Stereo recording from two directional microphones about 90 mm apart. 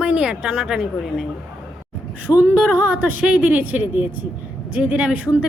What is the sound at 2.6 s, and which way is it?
Speech, 10° right (ahead or behind).